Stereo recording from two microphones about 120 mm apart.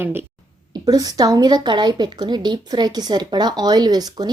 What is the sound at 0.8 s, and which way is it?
A woman's voice, 30° right (ahead or behind).